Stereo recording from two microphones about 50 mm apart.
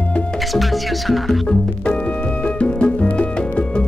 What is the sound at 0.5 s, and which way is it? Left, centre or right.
Music, centre.